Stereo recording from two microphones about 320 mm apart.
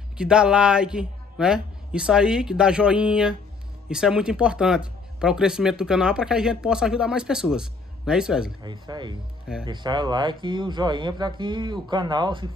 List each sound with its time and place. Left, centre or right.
0.2 s speech: centre
8.6 s speech: centre